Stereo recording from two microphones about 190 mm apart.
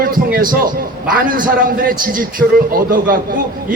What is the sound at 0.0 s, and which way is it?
A man's voice, 50° right (ahead or behind).